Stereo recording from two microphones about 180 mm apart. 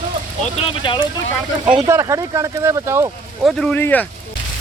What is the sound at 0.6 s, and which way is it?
Speech, 25° left (ahead or behind).